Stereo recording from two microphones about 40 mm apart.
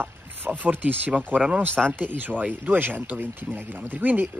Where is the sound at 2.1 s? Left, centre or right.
Right.